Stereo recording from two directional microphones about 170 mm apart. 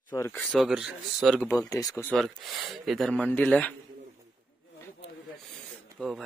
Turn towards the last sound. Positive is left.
turn(degrees=0)  # may be behind; listen again after turning